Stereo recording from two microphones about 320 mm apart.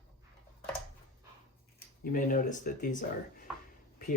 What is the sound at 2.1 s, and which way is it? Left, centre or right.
Speech, left.